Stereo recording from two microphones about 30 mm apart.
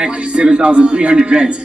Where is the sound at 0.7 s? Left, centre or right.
Right.